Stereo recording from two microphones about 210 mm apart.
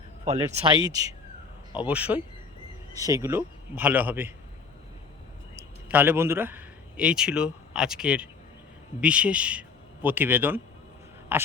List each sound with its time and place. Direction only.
0.3 s speech: 25° right (ahead or behind)
1.8 s a man's voice: 5° right (ahead or behind)
5.5 s a man's voice: 10° right (ahead or behind)